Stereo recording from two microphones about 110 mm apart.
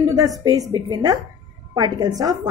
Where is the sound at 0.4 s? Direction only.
35° right (ahead or behind).